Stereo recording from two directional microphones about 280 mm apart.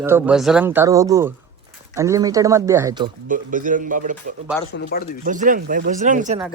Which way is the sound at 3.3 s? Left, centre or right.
Right.